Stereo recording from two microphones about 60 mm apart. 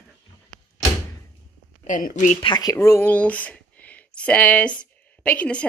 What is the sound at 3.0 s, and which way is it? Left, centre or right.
A woman's voice, left.